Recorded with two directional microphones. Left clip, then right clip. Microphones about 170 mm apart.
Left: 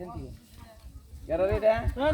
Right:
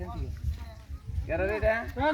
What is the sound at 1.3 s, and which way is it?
Speech, 30° left (ahead or behind).